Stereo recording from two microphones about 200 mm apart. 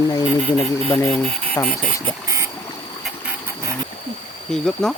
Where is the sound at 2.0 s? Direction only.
15° right (ahead or behind).